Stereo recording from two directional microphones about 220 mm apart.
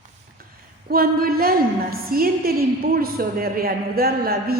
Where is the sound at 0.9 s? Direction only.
40° right (ahead or behind).